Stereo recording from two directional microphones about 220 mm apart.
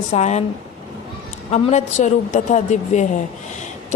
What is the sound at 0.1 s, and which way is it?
Speech, 30° left (ahead or behind).